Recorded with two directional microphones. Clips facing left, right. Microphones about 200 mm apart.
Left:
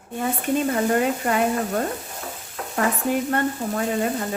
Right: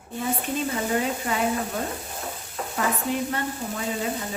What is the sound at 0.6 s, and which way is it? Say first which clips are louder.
Speech: left 6 dB; 55° left (ahead or behind).